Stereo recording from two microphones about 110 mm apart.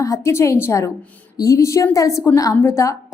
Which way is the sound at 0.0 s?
30° left (ahead or behind).